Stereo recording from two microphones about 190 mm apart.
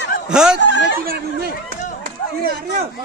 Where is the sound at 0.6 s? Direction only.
70° left (ahead or behind).